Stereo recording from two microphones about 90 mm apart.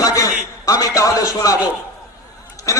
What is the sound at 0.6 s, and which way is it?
A man's voice, 35° left (ahead or behind).